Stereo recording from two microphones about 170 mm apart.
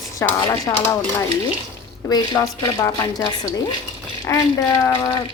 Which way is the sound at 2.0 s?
20° left (ahead or behind).